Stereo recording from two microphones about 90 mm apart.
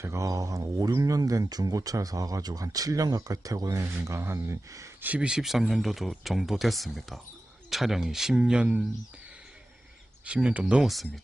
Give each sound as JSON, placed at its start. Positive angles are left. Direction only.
{"t": 0.0, "sound": "speech", "side_deg": -35}
{"t": 4.9, "sound": "speech", "side_deg": -15}
{"t": 10.2, "sound": "speech", "side_deg": -15}